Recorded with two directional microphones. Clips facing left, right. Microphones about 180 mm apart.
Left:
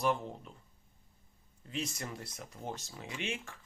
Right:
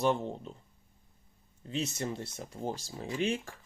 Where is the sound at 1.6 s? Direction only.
25° right (ahead or behind).